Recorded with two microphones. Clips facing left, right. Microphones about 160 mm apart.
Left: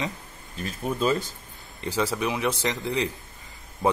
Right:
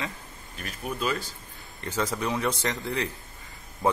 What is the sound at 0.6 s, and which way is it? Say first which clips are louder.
Speech: left 5 dB; 25° left (ahead or behind).